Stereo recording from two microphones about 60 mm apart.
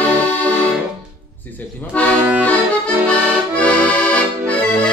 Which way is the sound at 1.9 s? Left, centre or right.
Left.